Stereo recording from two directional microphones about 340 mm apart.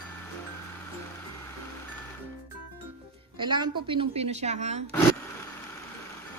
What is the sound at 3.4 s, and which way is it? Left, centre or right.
A woman's voice, centre.